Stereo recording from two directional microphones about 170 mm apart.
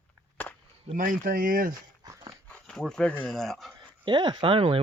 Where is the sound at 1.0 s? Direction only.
55° right (ahead or behind).